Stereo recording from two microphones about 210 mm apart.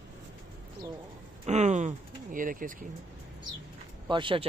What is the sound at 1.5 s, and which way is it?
Speech, 35° right (ahead or behind).